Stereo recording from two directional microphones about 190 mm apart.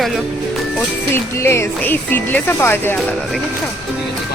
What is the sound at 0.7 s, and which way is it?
Speech, 10° left (ahead or behind).